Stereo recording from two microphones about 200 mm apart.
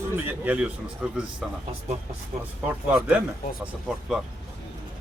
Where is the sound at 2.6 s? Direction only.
5° right (ahead or behind).